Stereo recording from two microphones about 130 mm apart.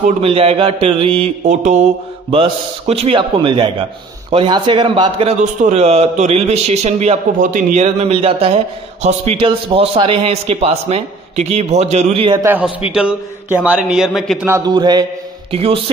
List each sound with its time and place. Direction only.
0.2 s a man's voice: 50° right (ahead or behind)
1.4 s a man's voice: 65° right (ahead or behind)
2.3 s a man's voice: 45° right (ahead or behind)
5.4 s a man's voice: 60° right (ahead or behind)
12.4 s a man's voice: 10° right (ahead or behind)
14.6 s a man's voice: 35° right (ahead or behind)
15.5 s a man's voice: 45° right (ahead or behind)